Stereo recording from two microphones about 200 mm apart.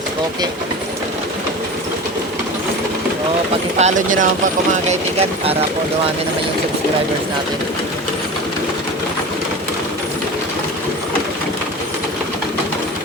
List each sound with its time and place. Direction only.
3.8 s speech: 35° right (ahead or behind)